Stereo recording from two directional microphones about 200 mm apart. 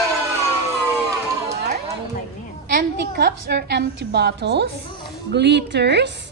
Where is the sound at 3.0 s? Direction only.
55° right (ahead or behind).